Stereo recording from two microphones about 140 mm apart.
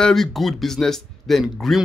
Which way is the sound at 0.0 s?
Centre (ahead or behind).